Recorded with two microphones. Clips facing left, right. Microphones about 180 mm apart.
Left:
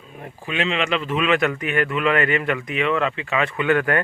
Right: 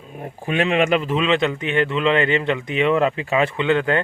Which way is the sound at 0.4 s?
50° right (ahead or behind).